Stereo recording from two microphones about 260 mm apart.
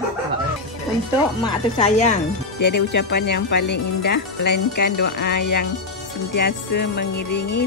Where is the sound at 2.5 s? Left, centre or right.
Left.